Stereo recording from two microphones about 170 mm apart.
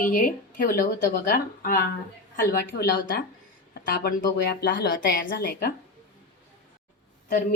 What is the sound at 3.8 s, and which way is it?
Speech, 60° left (ahead or behind).